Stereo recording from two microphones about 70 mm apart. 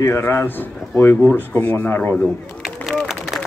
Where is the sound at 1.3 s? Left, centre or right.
Left.